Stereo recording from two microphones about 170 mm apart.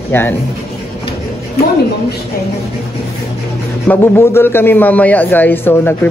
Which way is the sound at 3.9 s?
15° left (ahead or behind).